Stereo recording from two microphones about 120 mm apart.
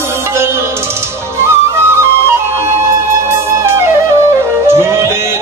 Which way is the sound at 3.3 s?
20° right (ahead or behind).